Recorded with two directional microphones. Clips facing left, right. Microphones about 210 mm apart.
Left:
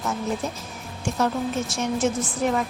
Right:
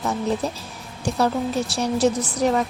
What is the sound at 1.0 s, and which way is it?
Speech, 35° right (ahead or behind).